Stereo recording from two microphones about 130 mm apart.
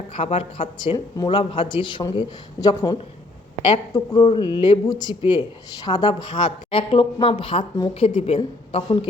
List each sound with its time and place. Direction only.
0.1 s speech: 45° left (ahead or behind)
0.9 s speech: 25° left (ahead or behind)